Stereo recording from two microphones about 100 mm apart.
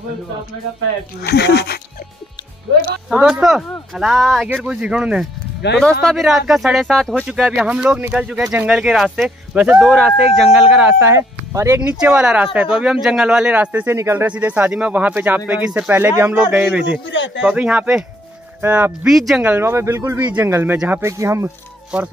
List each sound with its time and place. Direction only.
3.1 s speech: 10° right (ahead or behind)
5.8 s speech: 5° left (ahead or behind)
7.2 s speech: 5° right (ahead or behind)
11.0 s speech: 30° right (ahead or behind)
12.0 s speech: 10° right (ahead or behind); by 14.2 s 30° right (ahead or behind)
14.2 s speech: 15° right (ahead or behind)
19.0 s speech: 5° right (ahead or behind)
19.6 s speech: 25° right (ahead or behind)
20.2 s speech: 15° right (ahead or behind)
20.4 s speech: 30° right (ahead or behind)
20.7 s speech: 10° right (ahead or behind)
21.0 s speech: 30° right (ahead or behind)